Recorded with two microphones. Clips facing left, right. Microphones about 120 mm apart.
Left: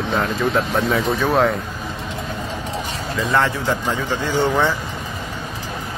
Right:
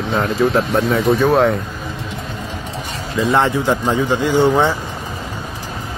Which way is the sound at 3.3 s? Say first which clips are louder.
Right 3 dB; 20° right (ahead or behind).